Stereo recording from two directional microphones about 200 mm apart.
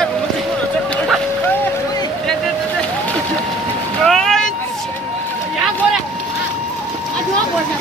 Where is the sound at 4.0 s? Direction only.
Centre (ahead or behind).